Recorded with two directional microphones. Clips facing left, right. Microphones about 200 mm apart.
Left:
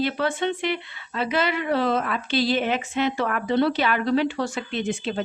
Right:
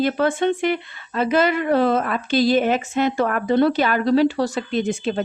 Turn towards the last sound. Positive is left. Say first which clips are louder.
# right 5 dB
turn(degrees=-45)  # may be behind; listen again after turning